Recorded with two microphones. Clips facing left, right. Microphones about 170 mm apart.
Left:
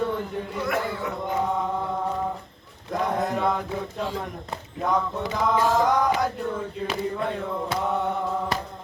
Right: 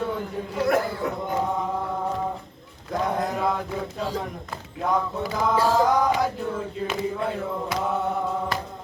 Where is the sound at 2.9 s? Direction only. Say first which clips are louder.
Even; centre (ahead or behind).